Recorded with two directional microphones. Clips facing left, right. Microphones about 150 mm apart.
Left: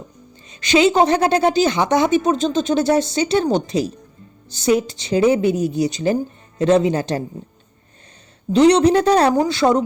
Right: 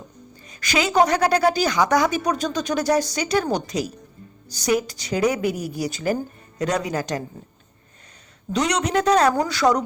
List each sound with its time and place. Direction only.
0.4 s a woman's voice: 25° left (ahead or behind)
8.5 s a woman's voice: 30° left (ahead or behind)